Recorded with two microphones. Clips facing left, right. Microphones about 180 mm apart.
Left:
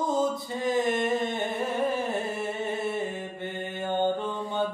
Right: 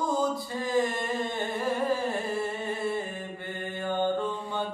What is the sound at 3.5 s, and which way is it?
Mantra, 25° left (ahead or behind).